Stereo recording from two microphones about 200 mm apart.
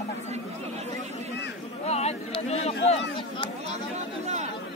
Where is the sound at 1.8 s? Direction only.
30° left (ahead or behind).